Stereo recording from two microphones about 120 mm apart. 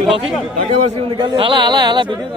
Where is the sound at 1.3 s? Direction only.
40° right (ahead or behind).